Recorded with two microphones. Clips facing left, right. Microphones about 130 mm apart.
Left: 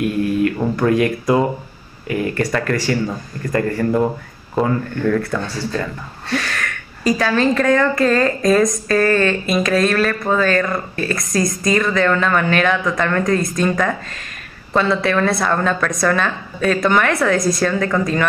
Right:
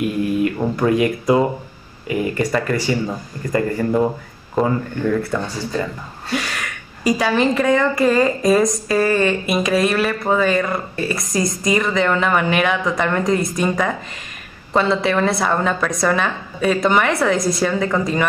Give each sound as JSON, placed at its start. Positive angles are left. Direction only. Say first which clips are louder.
{"t": 0.6, "sound": "a woman's voice", "louder": "left 1 dB", "side_deg": -5}